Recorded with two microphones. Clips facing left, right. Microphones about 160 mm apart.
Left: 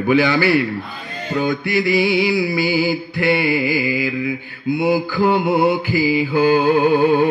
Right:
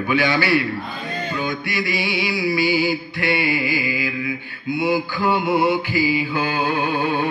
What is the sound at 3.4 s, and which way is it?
Mantra, 40° left (ahead or behind).